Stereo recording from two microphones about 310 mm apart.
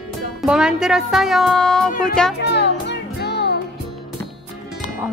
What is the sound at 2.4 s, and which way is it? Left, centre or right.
Music, left.